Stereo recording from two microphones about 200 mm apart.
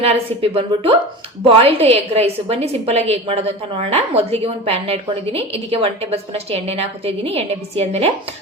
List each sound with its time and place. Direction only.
0.0 s a woman's voice: 30° right (ahead or behind)